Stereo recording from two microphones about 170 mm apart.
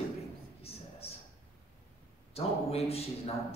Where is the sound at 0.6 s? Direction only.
35° left (ahead or behind).